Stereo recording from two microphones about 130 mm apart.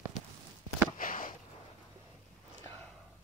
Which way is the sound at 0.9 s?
90° left.